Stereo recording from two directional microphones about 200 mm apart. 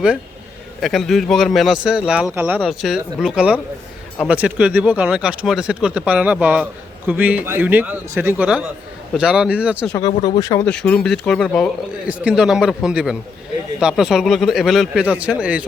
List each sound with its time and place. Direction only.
0.8 s a man's voice: centre (ahead or behind)
10.1 s speech: 30° left (ahead or behind)
10.4 s speech: 15° left (ahead or behind)
10.7 s speech: 5° left (ahead or behind)